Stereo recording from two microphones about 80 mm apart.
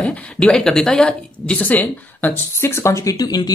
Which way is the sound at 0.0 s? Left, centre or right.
Centre.